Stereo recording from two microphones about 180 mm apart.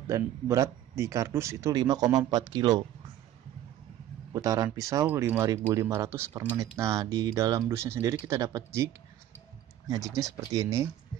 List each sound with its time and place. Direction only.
0.1 s a man's voice: 15° right (ahead or behind)
4.3 s a man's voice: 20° right (ahead or behind)